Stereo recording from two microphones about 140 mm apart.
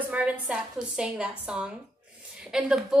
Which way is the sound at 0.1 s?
10° right (ahead or behind).